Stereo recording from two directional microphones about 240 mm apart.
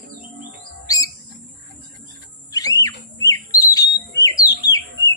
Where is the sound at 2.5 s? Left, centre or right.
Centre.